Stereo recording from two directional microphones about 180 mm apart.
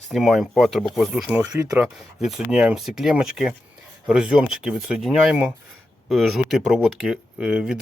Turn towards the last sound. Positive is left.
turn(degrees=-5)  # may be behind; listen again after turning